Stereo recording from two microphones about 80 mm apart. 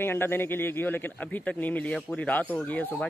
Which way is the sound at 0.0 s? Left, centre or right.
Left.